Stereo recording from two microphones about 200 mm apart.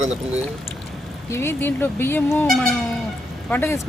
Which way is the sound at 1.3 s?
10° left (ahead or behind).